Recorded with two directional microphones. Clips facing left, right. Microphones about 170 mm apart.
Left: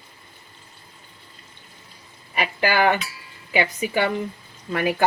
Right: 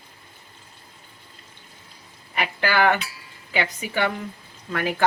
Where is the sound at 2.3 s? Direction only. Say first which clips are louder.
Left 2 dB; 15° left (ahead or behind).